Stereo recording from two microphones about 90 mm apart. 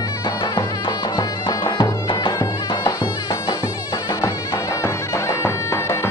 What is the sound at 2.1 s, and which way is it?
Music, 60° left (ahead or behind).